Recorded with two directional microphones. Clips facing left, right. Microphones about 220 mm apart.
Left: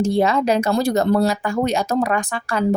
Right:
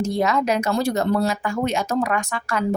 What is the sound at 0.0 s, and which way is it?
Speech, 30° left (ahead or behind).